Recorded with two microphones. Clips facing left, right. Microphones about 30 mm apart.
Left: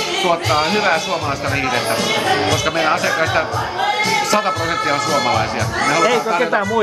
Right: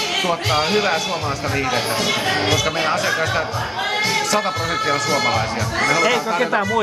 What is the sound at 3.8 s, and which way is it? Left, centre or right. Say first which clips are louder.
A man's voice: left 3 dB; centre.